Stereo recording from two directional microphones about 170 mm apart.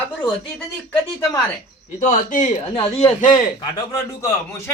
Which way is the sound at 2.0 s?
45° left (ahead or behind).